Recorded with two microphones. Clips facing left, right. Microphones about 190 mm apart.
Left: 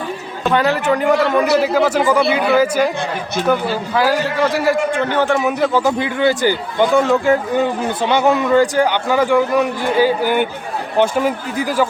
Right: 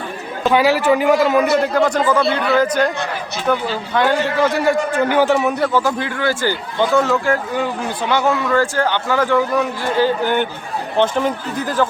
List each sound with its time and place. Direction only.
0.5 s a man's voice: 5° right (ahead or behind)
5.7 s a man's voice: 15° left (ahead or behind)